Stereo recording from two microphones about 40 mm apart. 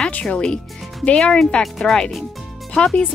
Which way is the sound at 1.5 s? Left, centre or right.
Left.